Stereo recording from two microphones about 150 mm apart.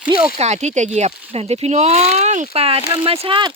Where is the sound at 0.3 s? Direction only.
50° right (ahead or behind).